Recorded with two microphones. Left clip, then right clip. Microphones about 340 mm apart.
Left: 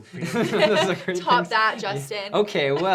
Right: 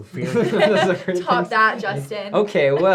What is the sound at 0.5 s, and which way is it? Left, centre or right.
A woman's voice, left.